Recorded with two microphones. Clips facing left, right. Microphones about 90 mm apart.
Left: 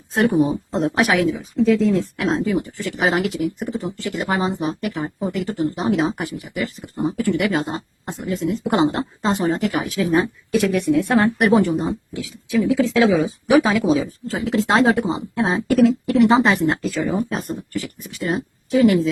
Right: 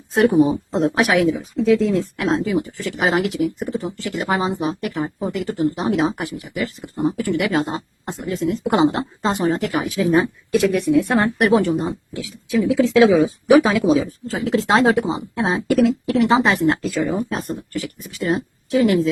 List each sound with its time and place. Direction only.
0.3 s speech: 15° right (ahead or behind)
0.7 s speech: centre (ahead or behind)
13.6 s speech: 15° right (ahead or behind)
14.3 s speech: centre (ahead or behind)